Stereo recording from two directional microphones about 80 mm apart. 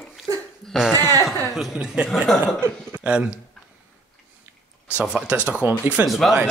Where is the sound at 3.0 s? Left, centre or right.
Centre.